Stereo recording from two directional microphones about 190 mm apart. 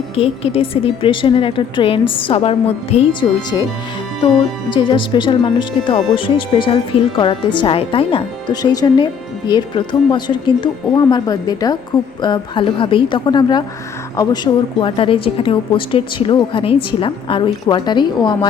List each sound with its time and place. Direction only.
0.2 s a woman's voice: 30° left (ahead or behind)
4.7 s a woman's voice: 25° left (ahead or behind)